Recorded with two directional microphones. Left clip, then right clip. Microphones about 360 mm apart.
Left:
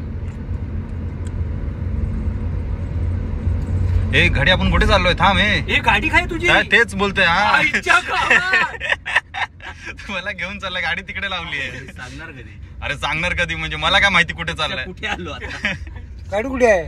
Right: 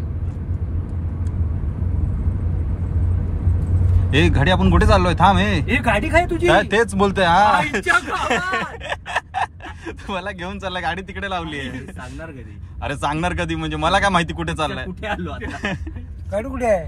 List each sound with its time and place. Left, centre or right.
4.1 s speech: centre
12.8 s speech: centre
16.3 s a man's voice: left